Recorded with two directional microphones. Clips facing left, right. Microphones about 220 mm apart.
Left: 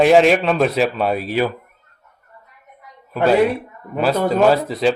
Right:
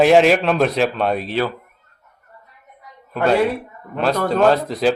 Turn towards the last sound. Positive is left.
turn(degrees=0)  # may be behind; listen again after turning